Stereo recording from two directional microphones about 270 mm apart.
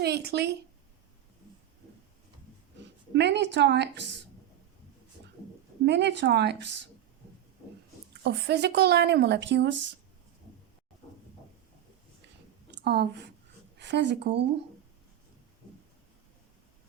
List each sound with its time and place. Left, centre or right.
0.0 s speech: right
3.1 s speech: right
5.8 s speech: right
8.2 s speech: right
12.8 s a woman's voice: right